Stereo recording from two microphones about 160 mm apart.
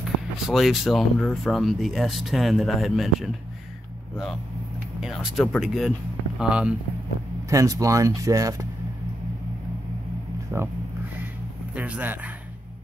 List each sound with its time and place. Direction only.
0.5 s speech: centre (ahead or behind)
5.0 s speech: centre (ahead or behind)
7.4 s speech: 20° right (ahead or behind)
10.5 s speech: 15° right (ahead or behind)
11.7 s speech: 10° right (ahead or behind)